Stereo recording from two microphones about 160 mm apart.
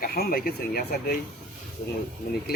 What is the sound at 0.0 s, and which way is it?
Speech, 70° left (ahead or behind).